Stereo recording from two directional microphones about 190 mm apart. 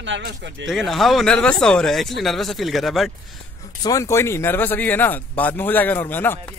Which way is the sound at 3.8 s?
15° left (ahead or behind).